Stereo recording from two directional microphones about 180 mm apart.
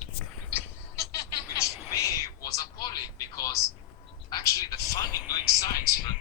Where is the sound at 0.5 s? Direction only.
15° left (ahead or behind).